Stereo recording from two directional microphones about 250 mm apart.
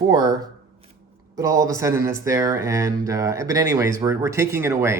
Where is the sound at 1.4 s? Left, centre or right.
Centre.